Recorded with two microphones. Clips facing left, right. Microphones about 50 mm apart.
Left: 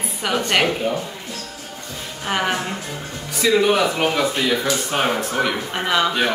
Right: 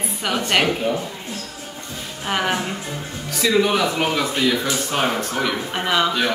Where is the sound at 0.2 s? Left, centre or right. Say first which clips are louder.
Left 1 dB; centre.